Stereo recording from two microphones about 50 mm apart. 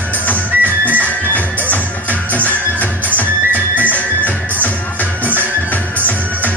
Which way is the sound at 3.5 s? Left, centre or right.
Right.